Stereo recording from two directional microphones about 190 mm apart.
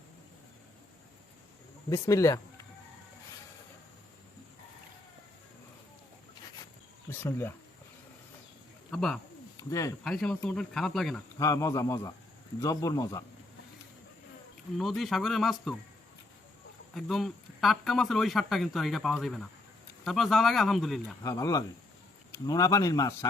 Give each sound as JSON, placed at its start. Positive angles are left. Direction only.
{"t": 1.9, "sound": "speech", "side_deg": 15}
{"t": 7.1, "sound": "speech", "side_deg": 10}
{"t": 8.9, "sound": "speech", "side_deg": 5}
{"t": 9.6, "sound": "speech", "side_deg": 20}
{"t": 10.0, "sound": "speech", "side_deg": 5}
{"t": 11.3, "sound": "speech", "side_deg": 15}
{"t": 14.8, "sound": "speech", "side_deg": 0}
{"t": 16.9, "sound": "speech", "side_deg": 0}
{"t": 21.2, "sound": "speech", "side_deg": 20}